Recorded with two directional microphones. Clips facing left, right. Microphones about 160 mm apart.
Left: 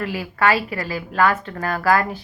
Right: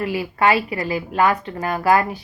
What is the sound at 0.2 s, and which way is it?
Speech, 15° right (ahead or behind).